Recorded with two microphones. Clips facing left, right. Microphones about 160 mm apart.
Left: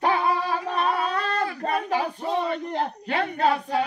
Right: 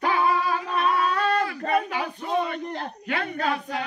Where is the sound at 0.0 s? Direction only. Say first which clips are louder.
Even; 35° left (ahead or behind).